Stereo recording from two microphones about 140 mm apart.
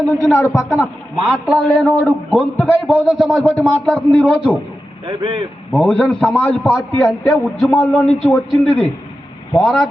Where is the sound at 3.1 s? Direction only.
Centre (ahead or behind).